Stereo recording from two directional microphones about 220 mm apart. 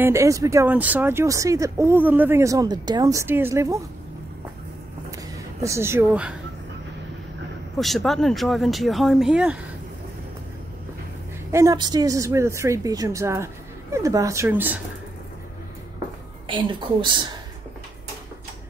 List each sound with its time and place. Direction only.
0.0 s speech: 15° right (ahead or behind)
5.1 s a sound: 15° right (ahead or behind)
7.8 s speech: centre (ahead or behind)
11.5 s speech: 15° right (ahead or behind)
16.4 s a woman's voice: 20° right (ahead or behind)